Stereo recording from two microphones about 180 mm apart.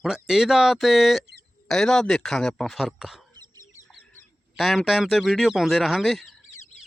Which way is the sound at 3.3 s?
20° right (ahead or behind).